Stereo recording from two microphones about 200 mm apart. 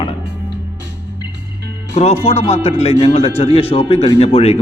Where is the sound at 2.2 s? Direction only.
30° left (ahead or behind).